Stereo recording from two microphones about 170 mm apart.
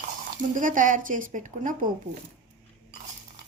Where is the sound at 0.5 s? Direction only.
50° right (ahead or behind).